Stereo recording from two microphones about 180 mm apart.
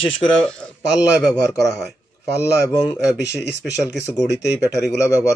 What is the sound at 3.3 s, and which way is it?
Speech, 70° left (ahead or behind).